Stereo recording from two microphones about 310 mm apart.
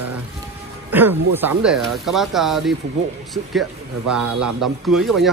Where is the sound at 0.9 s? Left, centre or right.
Centre.